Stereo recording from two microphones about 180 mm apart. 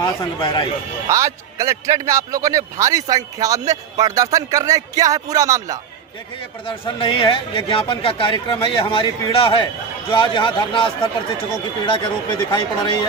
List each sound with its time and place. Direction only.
0.0 s a man's voice: 25° left (ahead or behind)
1.0 s a man's voice: 15° right (ahead or behind)
6.7 s a man's voice: 30° left (ahead or behind)